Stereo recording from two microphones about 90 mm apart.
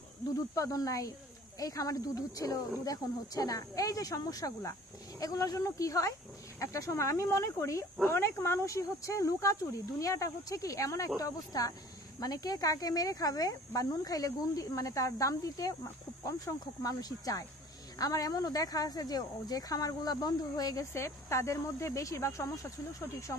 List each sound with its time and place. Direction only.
0.6 s speech: 40° left (ahead or behind)
20.9 s speech: 30° left (ahead or behind)